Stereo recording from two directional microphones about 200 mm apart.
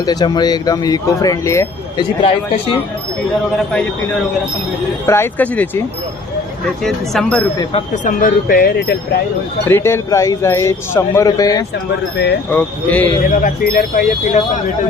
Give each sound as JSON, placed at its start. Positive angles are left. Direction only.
{"t": 0.0, "sound": "speech", "side_deg": 20}
{"t": 5.0, "sound": "speech", "side_deg": 10}
{"t": 6.8, "sound": "speech", "side_deg": 0}
{"t": 7.7, "sound": "speech", "side_deg": 30}
{"t": 8.2, "sound": "speech", "side_deg": 45}
{"t": 9.6, "sound": "speech", "side_deg": 10}
{"t": 12.1, "sound": "speech", "side_deg": 55}
{"t": 12.5, "sound": "speech", "side_deg": 10}
{"t": 13.2, "sound": "speech", "side_deg": 45}